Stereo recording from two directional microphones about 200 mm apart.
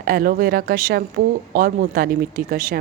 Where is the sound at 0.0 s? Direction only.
45° right (ahead or behind).